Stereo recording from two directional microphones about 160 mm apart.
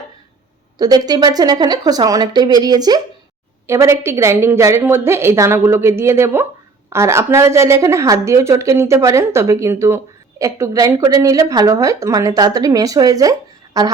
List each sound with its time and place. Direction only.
0.8 s a woman's voice: 25° right (ahead or behind)